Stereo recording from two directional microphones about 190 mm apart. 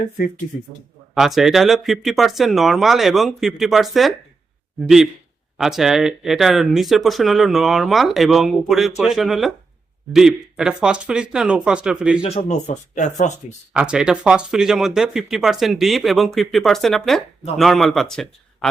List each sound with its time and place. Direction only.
1.1 s speech: centre (ahead or behind)
12.2 s speech: 35° left (ahead or behind)
13.7 s speech: 5° right (ahead or behind)